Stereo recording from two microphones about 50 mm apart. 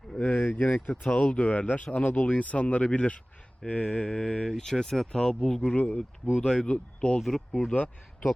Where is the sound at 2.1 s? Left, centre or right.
Left.